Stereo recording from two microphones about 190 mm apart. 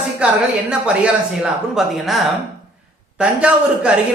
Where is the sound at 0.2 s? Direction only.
5° right (ahead or behind).